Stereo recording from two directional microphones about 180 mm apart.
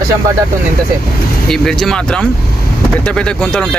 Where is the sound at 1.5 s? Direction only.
Centre (ahead or behind).